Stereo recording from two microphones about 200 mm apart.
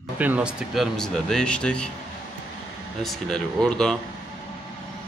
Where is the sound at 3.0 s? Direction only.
Centre (ahead or behind).